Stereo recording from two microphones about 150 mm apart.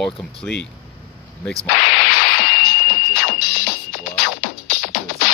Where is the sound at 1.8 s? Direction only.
90° left.